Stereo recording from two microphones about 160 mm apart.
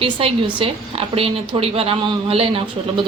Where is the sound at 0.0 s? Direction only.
35° right (ahead or behind).